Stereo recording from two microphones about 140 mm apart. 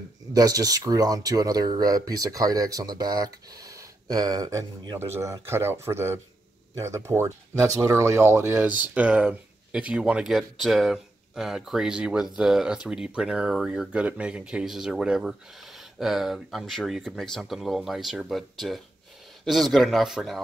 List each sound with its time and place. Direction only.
0.3 s speech: 25° right (ahead or behind); by 20.4 s centre (ahead or behind)